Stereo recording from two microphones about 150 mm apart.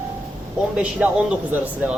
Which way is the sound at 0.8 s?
10° right (ahead or behind).